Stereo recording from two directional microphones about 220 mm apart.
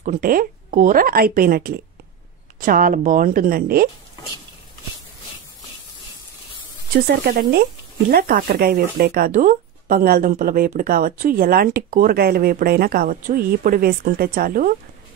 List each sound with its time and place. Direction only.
0.0 s speech: 40° right (ahead or behind)
7.2 s speech: 45° right (ahead or behind)